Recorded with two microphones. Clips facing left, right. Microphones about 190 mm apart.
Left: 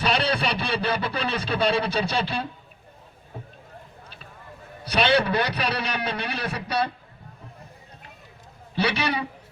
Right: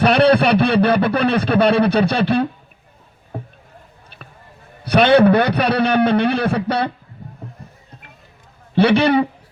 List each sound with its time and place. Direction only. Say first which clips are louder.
0.0 s a man's voice: right 11 dB; 60° right (ahead or behind)
3.3 s rowboat: right 9 dB; 60° right (ahead or behind)
4.9 s a man's voice: right 10 dB; 55° right (ahead or behind)
8.7 s a man's voice: right 12 dB; 55° right (ahead or behind)